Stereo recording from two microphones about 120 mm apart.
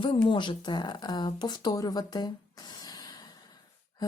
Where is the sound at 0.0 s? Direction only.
45° left (ahead or behind).